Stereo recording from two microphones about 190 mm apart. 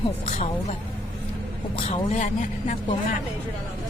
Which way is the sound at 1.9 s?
30° left (ahead or behind).